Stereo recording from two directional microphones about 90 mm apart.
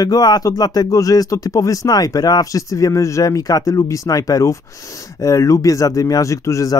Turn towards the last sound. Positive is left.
turn(degrees=35)  # may be behind; listen again after turning